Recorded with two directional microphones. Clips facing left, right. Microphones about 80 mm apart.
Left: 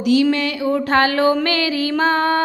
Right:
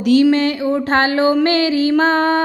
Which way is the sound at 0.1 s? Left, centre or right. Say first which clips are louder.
Right 4 dB; right.